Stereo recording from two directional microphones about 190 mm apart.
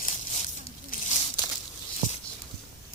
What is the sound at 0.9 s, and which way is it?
Crumpling, 45° left (ahead or behind).